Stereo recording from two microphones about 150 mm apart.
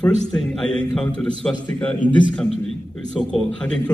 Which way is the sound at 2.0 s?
30° left (ahead or behind).